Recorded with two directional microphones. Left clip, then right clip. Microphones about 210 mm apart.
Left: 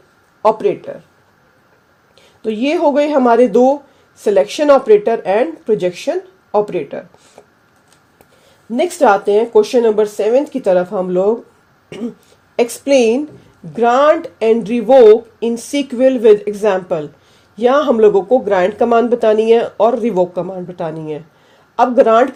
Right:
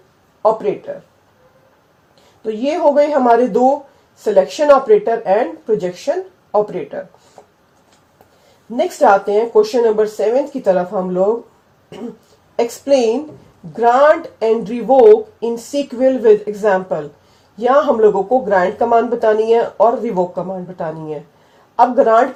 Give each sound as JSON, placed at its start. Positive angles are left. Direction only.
{"t": 2.4, "sound": "speech", "side_deg": 50}
{"t": 8.7, "sound": "speech", "side_deg": 50}
{"t": 12.5, "sound": "speech", "side_deg": 50}